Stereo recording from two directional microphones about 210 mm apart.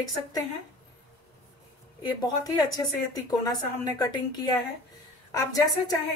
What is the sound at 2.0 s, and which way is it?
A woman's voice, 20° left (ahead or behind).